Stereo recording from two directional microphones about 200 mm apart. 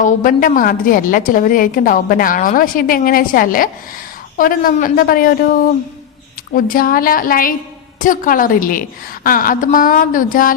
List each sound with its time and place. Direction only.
0.0 s a woman's voice: 40° left (ahead or behind)